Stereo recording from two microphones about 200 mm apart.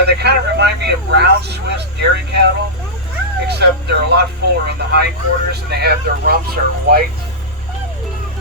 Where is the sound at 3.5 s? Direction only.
55° right (ahead or behind).